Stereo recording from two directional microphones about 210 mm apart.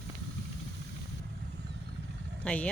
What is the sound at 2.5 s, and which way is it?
Speech, 5° left (ahead or behind).